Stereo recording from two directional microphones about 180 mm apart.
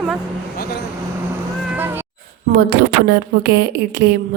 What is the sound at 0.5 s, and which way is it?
Speech, 55° left (ahead or behind).